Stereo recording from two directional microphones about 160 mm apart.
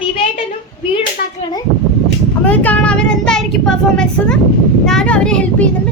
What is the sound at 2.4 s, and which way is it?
A child's voice, 10° left (ahead or behind).